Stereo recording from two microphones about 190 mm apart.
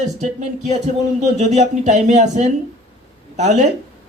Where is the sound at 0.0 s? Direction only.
35° right (ahead or behind).